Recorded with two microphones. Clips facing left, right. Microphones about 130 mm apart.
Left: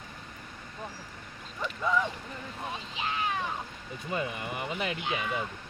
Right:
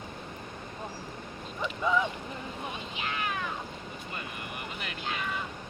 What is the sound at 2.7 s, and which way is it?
Speech, 30° left (ahead or behind).